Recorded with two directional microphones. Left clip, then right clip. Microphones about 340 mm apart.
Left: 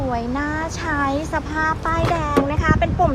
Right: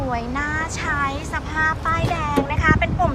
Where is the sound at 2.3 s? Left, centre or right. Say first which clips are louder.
Even; centre.